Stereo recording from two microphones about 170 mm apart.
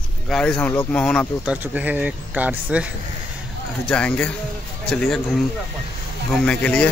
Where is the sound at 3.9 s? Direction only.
5° left (ahead or behind).